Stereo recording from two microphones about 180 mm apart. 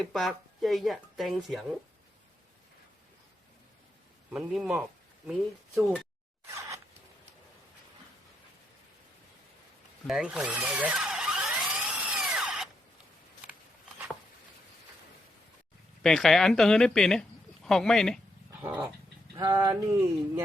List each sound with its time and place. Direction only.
0.1 s speech: centre (ahead or behind)
4.3 s a man's voice: 5° right (ahead or behind)
6.5 s a sound: 15° right (ahead or behind)
10.1 s drill: 5° right (ahead or behind)
16.0 s a woman's voice: centre (ahead or behind)
18.6 s dog: 15° right (ahead or behind)
19.4 s a sound: 20° right (ahead or behind)